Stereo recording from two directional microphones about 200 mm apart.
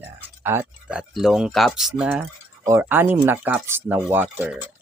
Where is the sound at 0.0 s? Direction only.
10° right (ahead or behind).